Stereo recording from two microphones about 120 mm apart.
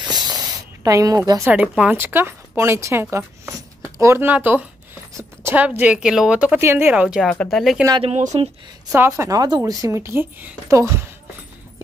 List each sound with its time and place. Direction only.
0.0 s snake: 35° right (ahead or behind)
1.5 s speech: 10° right (ahead or behind)
7.2 s speech: 5° left (ahead or behind)
8.0 s speech: 70° right (ahead or behind)
8.9 s a woman's voice: 20° right (ahead or behind)